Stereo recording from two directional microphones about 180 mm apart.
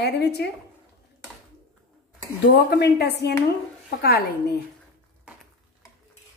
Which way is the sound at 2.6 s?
65° left (ahead or behind).